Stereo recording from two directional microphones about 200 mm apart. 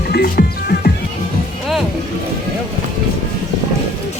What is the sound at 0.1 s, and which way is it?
Music, 50° left (ahead or behind).